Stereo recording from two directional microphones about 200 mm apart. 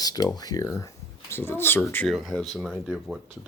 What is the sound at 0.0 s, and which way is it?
Speech, 20° left (ahead or behind).